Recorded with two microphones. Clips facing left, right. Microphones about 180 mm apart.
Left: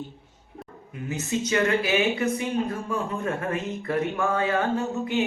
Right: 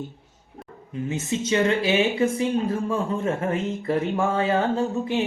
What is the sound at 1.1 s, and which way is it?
Speech, 25° right (ahead or behind).